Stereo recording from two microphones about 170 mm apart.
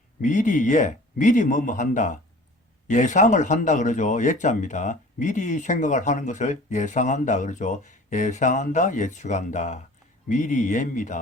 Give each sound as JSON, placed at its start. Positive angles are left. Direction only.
{"t": 0.2, "sound": "speech", "side_deg": 50}